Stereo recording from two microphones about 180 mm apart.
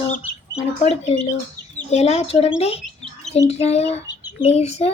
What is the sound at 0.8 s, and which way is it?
Bird, 40° left (ahead or behind).